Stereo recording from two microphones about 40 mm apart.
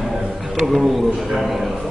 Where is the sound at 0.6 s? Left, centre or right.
Centre.